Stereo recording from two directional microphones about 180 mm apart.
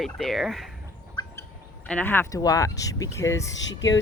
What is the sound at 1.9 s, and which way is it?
Speech, 10° left (ahead or behind).